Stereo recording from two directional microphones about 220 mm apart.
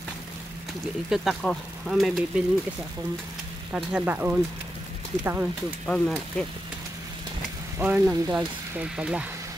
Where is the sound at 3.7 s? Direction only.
5° right (ahead or behind).